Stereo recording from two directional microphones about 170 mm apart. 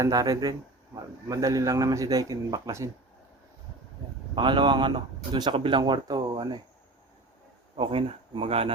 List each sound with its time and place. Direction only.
0.0 s speech: 20° right (ahead or behind)
4.4 s speech: 25° right (ahead or behind)
7.8 s speech: 30° right (ahead or behind)